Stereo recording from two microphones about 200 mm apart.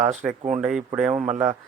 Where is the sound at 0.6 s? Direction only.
5° right (ahead or behind).